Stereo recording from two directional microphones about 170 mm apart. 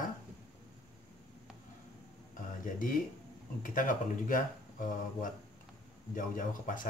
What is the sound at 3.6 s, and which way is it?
Speech, 50° left (ahead or behind).